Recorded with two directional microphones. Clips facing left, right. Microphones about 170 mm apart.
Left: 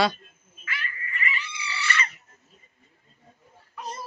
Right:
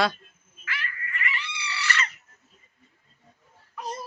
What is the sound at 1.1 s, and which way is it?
Cat, 70° right (ahead or behind).